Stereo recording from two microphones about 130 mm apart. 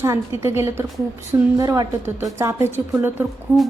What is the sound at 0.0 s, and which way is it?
A woman's voice, 20° right (ahead or behind).